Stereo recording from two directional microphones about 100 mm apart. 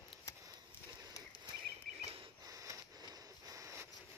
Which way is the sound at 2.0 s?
70° right (ahead or behind).